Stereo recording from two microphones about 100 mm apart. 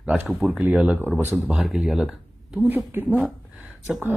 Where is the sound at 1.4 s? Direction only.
Centre (ahead or behind).